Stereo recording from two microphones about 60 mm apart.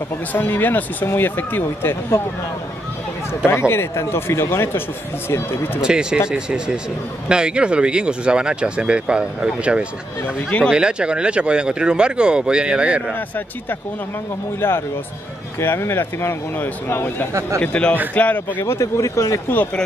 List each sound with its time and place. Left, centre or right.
0.3 s speech: left
3.4 s speech: left
5.8 s speech: centre
10.2 s speech: left
10.7 s speech: centre
15.6 s speech: left
17.3 s a man's voice: right
17.6 s a man's voice: centre
18.6 s speech: left